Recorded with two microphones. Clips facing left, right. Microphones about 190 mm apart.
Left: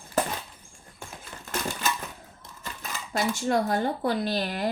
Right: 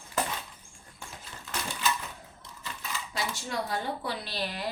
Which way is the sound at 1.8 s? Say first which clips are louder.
Right 1 dB; 45° left (ahead or behind).